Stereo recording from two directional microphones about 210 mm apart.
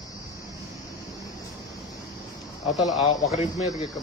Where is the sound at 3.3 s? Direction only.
30° left (ahead or behind).